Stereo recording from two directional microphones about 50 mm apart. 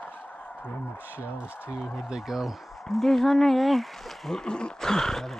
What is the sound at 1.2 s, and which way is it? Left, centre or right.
Speech, right.